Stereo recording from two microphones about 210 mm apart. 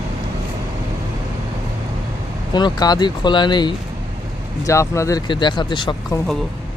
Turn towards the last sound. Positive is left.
turn(degrees=20)  # may be behind; listen again after turning